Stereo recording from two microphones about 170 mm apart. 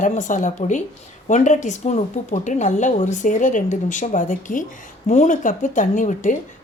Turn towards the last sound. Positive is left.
turn(degrees=50)  # may be behind; listen again after turning